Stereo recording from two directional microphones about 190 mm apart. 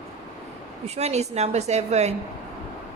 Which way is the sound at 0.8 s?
35° right (ahead or behind).